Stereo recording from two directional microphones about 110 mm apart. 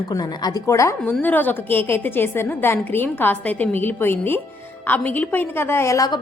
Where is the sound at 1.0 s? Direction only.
15° left (ahead or behind).